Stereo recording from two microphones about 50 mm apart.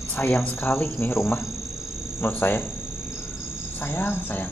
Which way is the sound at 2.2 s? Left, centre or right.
Left.